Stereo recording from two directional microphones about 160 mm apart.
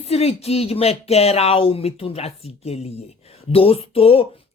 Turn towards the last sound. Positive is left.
turn(degrees=35)  # may be behind; listen again after turning